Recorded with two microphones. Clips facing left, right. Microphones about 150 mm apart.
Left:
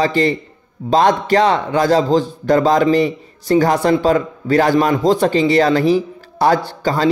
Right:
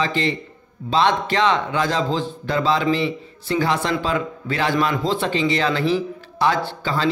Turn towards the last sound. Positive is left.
turn(degrees=40)  # may be behind; listen again after turning